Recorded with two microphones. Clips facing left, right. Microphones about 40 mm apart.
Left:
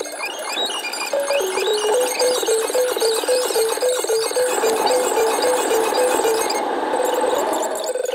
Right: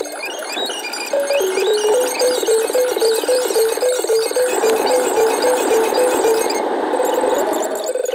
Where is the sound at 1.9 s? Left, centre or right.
Left.